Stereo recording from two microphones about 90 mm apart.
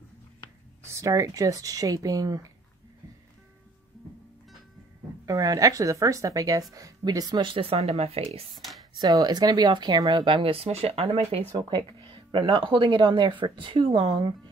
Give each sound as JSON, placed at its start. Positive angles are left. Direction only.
{"t": 0.8, "sound": "speech", "side_deg": -35}
{"t": 5.2, "sound": "speech", "side_deg": -40}
{"t": 7.4, "sound": "speech", "side_deg": -90}
{"t": 9.0, "sound": "speech", "side_deg": -45}
{"t": 10.2, "sound": "speech", "side_deg": -80}
{"t": 11.5, "sound": "speech", "side_deg": -65}